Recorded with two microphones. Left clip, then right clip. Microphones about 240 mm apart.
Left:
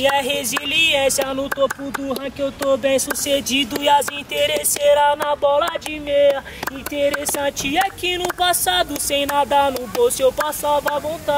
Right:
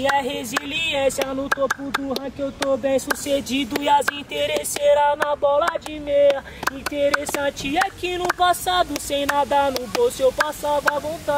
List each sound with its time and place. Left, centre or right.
0.0 s speech: centre
2.8 s speech: centre